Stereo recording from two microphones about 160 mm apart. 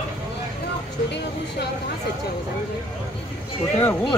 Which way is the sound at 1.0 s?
90° left.